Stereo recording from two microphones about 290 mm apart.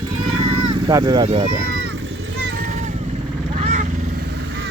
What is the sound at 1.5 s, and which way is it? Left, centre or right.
Vehicle, right.